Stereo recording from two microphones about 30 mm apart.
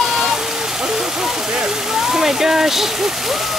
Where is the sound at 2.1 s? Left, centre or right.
Centre.